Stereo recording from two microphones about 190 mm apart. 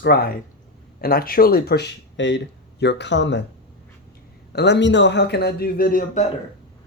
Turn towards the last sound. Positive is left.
turn(degrees=45)  # may be behind; listen again after turning